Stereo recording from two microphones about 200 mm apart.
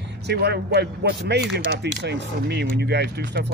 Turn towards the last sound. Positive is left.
turn(degrees=-55)  # may be behind; listen again after turning